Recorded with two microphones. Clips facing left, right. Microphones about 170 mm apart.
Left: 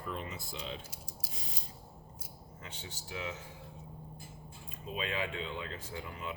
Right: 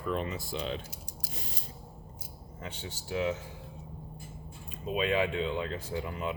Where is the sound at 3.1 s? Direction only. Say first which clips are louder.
Right 10 dB; 30° right (ahead or behind).